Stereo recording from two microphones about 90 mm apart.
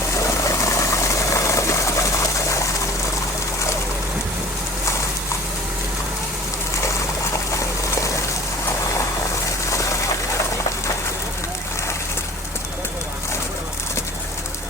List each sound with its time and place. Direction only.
0.2 s engine: 35° left (ahead or behind)
8.6 s vehicle: 35° left (ahead or behind)
9.6 s a sound: 35° left (ahead or behind)